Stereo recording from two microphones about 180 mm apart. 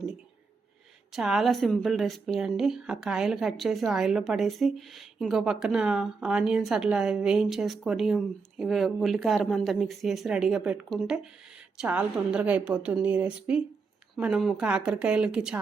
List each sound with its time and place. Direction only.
1.1 s a woman's voice: centre (ahead or behind)